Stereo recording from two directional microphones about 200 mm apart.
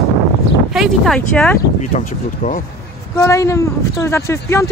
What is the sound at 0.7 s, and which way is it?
Speech, centre (ahead or behind).